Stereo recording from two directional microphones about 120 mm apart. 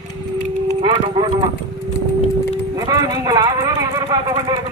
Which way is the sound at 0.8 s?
45° right (ahead or behind).